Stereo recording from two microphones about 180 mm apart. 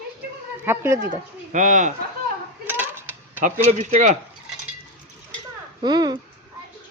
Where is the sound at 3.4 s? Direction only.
40° right (ahead or behind).